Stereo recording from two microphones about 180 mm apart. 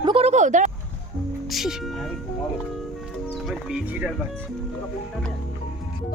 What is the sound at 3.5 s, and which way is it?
Speech, 5° right (ahead or behind).